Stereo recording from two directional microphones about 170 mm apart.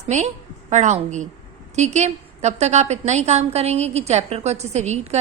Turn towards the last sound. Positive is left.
turn(degrees=-40)  # may be behind; listen again after turning